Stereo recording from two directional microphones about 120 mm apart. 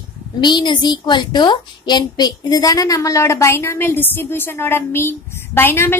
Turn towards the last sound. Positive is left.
turn(degrees=20)  # may be behind; listen again after turning